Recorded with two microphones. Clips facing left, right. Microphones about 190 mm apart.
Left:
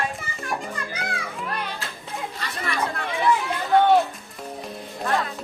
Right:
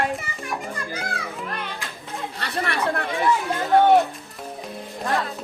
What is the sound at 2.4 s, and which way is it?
Chatter, 65° right (ahead or behind).